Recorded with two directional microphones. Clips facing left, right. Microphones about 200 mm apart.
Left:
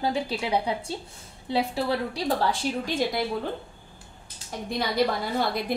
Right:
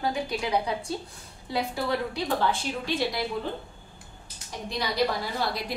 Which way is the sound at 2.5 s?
45° left (ahead or behind).